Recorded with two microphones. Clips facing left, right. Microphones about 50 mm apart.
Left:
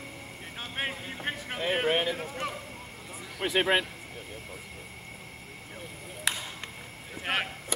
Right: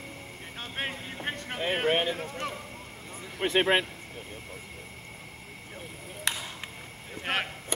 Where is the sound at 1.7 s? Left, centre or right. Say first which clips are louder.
Even; centre.